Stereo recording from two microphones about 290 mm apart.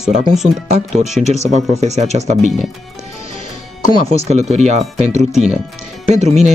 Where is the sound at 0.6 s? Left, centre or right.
Right.